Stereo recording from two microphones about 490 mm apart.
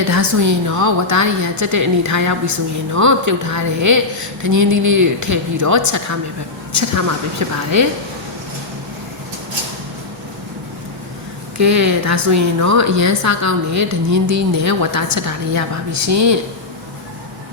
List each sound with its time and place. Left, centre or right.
0.0 s a woman's voice: right
11.5 s a woman's voice: right